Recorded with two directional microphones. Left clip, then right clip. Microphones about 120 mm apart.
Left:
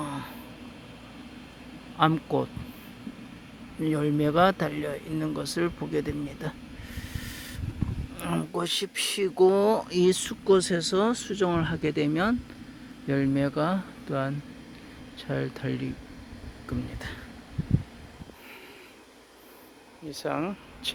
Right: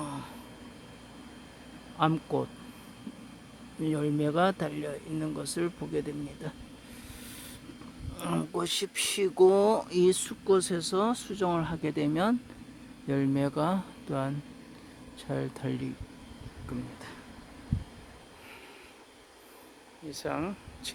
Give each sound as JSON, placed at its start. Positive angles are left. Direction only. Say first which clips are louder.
{"t": 0.0, "sound": "a sound", "louder": "left 4 dB", "side_deg": -15}
{"t": 2.0, "sound": "speech", "louder": "left 4 dB", "side_deg": -10}
{"t": 3.8, "sound": "speech", "louder": "left 4 dB", "side_deg": -10}
{"t": 6.9, "sound": "a sound", "louder": "left 8 dB", "side_deg": -5}
{"t": 8.1, "sound": "a sound", "louder": "left 1 dB", "side_deg": -25}
{"t": 8.5, "sound": "speech", "louder": "left 4 dB", "side_deg": -20}
{"t": 10.4, "sound": "speech", "louder": "left 4 dB", "side_deg": 0}
{"t": 16.6, "sound": "speech", "louder": "left 5 dB", "side_deg": 10}
{"t": 20.1, "sound": "speech", "louder": "left 3 dB", "side_deg": -5}